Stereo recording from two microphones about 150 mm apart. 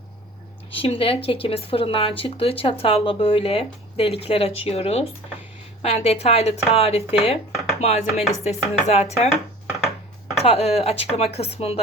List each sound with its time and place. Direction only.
0.7 s speech: 40° left (ahead or behind)
10.3 s speech: 40° left (ahead or behind)